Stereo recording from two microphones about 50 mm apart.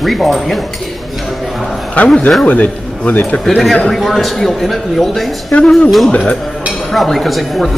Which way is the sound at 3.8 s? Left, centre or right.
Centre.